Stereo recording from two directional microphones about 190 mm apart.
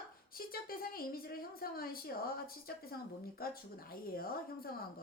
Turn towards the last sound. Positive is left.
turn(degrees=50)  # may be behind; listen again after turning